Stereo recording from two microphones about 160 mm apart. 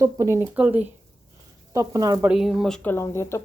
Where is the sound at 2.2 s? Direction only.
5° right (ahead or behind); by 3.4 s 15° left (ahead or behind).